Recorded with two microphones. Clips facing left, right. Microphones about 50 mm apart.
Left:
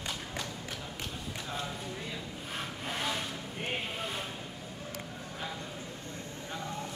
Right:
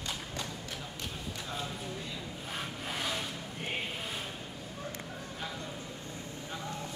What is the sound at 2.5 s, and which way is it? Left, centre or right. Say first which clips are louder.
Sawing: left 1 dB; centre.